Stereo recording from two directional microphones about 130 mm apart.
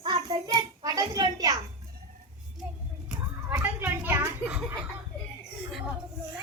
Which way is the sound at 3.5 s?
15° right (ahead or behind).